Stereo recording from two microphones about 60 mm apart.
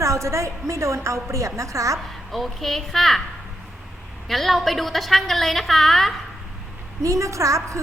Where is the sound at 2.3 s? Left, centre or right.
Centre.